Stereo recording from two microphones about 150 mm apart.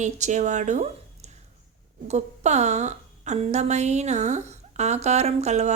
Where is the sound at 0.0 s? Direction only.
50° right (ahead or behind).